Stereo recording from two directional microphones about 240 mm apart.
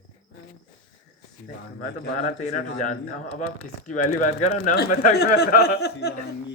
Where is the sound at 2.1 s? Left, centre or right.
Left.